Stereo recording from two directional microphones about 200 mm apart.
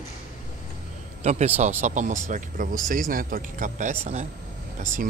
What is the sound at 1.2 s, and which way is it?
A man's voice, 35° right (ahead or behind).